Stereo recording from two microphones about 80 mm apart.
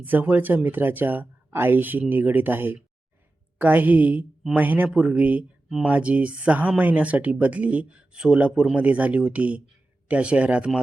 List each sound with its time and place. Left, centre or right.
0.0 s speech: right